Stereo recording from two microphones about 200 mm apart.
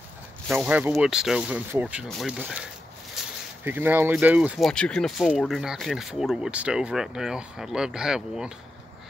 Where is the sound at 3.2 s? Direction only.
Centre (ahead or behind).